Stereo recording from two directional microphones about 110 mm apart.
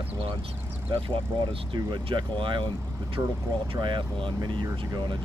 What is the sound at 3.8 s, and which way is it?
Speech, 45° right (ahead or behind).